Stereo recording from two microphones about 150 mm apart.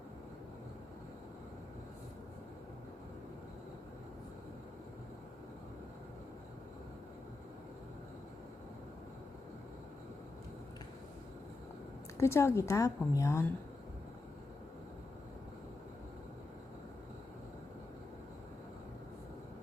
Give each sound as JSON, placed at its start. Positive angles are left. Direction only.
{"t": 12.1, "sound": "a woman's voice", "side_deg": 20}